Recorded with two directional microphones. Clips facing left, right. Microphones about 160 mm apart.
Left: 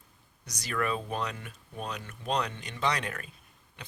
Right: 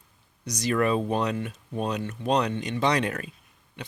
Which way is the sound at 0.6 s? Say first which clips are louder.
Right 8 dB; 25° right (ahead or behind).